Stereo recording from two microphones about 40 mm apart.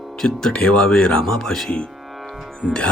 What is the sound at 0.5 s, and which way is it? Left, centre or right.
Speech, left.